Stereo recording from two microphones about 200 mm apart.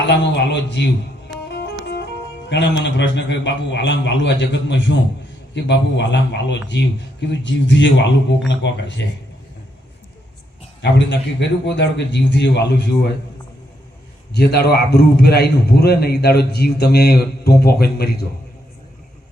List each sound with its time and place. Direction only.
0.1 s a man's voice: 60° left (ahead or behind)
10.8 s a man's voice: 60° left (ahead or behind)
14.3 s a man's voice: 55° left (ahead or behind)